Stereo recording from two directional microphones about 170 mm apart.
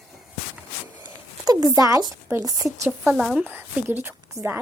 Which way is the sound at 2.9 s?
5° right (ahead or behind).